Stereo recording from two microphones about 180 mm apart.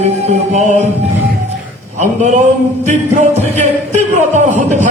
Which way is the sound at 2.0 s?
40° right (ahead or behind).